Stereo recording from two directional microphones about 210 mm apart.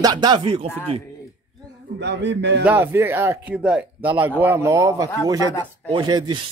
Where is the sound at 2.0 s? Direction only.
55° right (ahead or behind).